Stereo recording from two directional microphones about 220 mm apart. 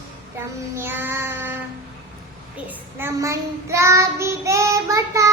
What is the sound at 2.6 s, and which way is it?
Child singing, 10° right (ahead or behind).